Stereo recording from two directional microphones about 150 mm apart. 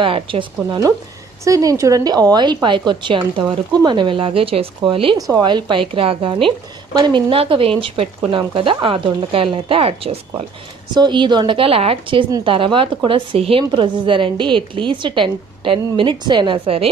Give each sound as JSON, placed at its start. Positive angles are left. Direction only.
{"t": 0.0, "sound": "a woman's voice", "side_deg": -35}
{"t": 5.1, "sound": "a woman's voice", "side_deg": -25}